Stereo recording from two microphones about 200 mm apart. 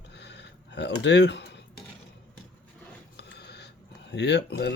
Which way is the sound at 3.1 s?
55° left (ahead or behind).